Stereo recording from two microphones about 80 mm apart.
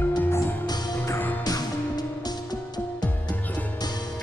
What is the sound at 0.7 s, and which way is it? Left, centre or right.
Music, left.